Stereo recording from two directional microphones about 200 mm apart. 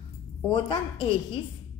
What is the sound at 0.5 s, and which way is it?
Speech, 25° left (ahead or behind).